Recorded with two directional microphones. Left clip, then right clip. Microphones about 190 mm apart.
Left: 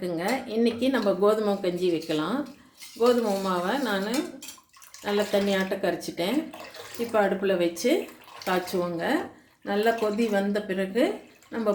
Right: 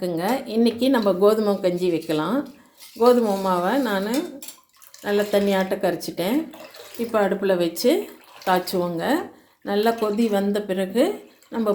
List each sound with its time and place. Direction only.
0.0 s speech: 25° right (ahead or behind)